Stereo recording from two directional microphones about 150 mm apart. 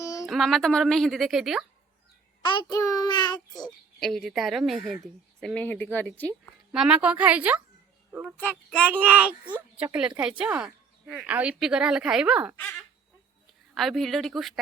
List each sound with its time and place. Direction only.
0.0 s a sound: 20° left (ahead or behind)
0.3 s speech: centre (ahead or behind)
2.4 s child singing: 30° left (ahead or behind)
4.0 s speech: centre (ahead or behind)
6.7 s speech: 5° right (ahead or behind)
8.4 s speech: 10° left (ahead or behind)
9.5 s speech: 10° right (ahead or behind)
13.7 s speech: centre (ahead or behind)